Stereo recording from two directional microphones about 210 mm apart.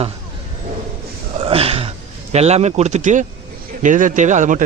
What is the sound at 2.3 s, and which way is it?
Speech, 30° right (ahead or behind).